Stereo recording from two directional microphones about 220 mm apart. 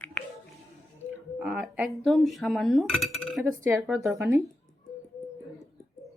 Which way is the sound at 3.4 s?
10° right (ahead or behind).